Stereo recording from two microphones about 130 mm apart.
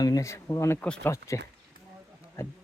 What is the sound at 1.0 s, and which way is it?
Speech, 20° left (ahead or behind).